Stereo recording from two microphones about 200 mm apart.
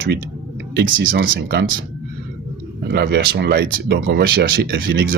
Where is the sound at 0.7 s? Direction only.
55° right (ahead or behind).